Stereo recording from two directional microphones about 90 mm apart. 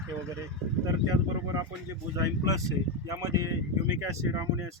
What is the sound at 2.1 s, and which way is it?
Speech, 40° right (ahead or behind).